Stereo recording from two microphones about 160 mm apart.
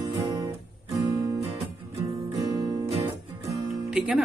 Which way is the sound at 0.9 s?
20° right (ahead or behind).